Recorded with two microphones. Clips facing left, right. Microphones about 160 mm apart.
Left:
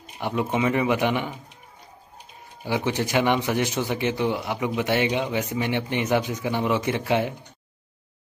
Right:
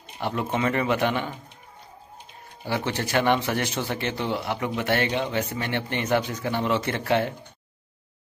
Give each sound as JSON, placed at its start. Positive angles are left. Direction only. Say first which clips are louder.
{"t": 0.2, "sound": "speech", "louder": "left 2 dB", "side_deg": 10}
{"t": 2.6, "sound": "speech", "louder": "left 3 dB", "side_deg": 15}